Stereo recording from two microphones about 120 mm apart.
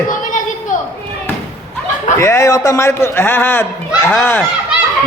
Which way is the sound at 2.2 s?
25° left (ahead or behind).